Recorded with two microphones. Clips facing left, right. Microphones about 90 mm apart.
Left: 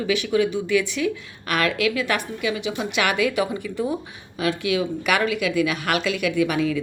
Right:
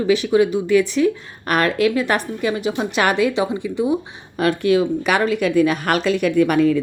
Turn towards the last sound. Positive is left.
turn(degrees=-50)  # may be behind; listen again after turning